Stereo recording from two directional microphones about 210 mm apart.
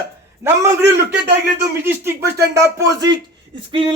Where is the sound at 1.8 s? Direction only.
10° right (ahead or behind).